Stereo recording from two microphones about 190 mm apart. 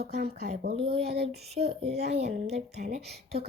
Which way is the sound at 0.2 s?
55° right (ahead or behind).